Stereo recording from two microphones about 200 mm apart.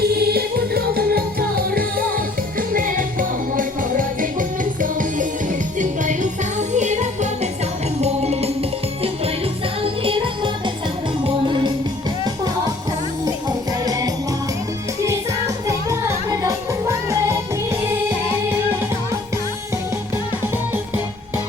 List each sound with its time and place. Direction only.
0.2 s music: 50° right (ahead or behind); by 8.4 s 30° right (ahead or behind)
10.0 s music: 25° right (ahead or behind)
13.2 s music: 20° right (ahead or behind)
15.6 s music: 15° right (ahead or behind)